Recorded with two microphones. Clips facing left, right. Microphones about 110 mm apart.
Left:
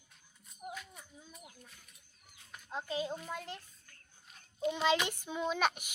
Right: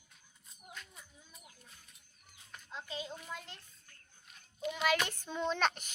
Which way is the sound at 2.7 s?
45° left (ahead or behind).